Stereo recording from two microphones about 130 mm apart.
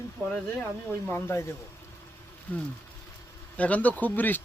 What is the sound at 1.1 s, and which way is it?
Speech, 20° left (ahead or behind).